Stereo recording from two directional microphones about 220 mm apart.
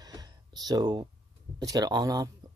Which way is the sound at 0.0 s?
15° right (ahead or behind).